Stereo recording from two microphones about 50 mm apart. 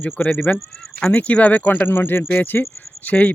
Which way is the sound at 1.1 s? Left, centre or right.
Left.